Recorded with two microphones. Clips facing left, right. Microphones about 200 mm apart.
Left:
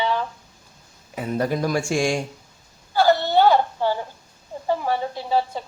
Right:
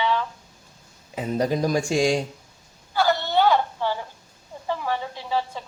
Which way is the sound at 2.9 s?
35° left (ahead or behind).